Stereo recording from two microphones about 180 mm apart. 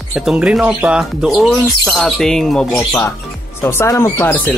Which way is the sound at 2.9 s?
15° left (ahead or behind).